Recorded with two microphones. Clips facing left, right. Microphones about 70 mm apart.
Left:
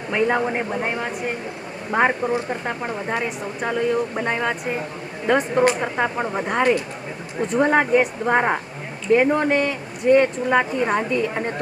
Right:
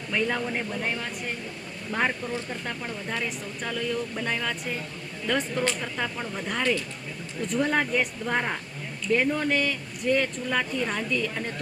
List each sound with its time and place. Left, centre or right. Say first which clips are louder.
0.1 s speech: left 7 dB; left
3.2 s speech: left 7 dB; left
3.7 s speech: left 8 dB; left
7.3 s speech: left 7 dB; left
7.6 s speech: left 8 dB; left